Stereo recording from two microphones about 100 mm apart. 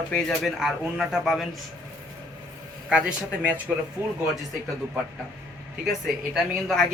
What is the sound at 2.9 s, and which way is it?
Speech, 10° right (ahead or behind).